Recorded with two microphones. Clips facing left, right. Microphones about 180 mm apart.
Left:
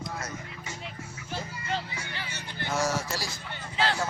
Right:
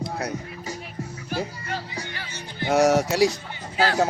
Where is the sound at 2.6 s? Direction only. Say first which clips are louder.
Right 11 dB; 65° right (ahead or behind).